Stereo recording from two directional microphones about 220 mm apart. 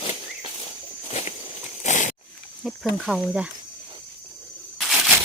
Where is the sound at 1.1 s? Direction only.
30° left (ahead or behind).